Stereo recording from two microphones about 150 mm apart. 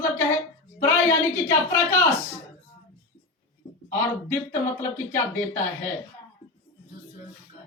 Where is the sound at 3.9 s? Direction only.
20° left (ahead or behind).